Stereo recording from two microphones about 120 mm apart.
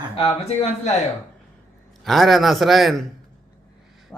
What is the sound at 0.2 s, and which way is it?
Speech, 55° left (ahead or behind).